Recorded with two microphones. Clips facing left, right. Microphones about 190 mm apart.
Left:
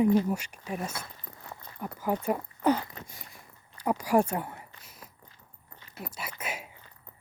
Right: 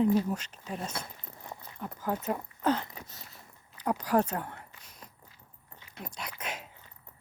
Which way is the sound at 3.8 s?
10° left (ahead or behind).